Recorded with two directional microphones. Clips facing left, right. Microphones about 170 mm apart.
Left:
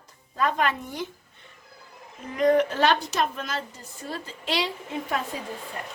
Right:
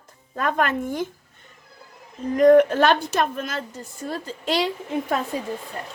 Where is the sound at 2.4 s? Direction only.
50° right (ahead or behind).